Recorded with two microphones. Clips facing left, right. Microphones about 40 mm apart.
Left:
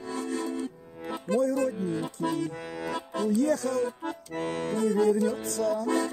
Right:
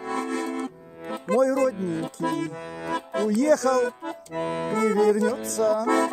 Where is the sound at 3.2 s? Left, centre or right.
Right.